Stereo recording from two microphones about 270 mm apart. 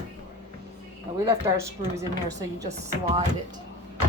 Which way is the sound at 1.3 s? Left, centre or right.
Centre.